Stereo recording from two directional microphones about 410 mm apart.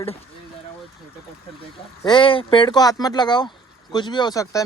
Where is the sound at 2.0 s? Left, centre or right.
Centre.